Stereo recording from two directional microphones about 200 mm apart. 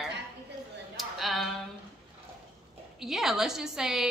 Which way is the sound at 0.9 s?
Centre (ahead or behind).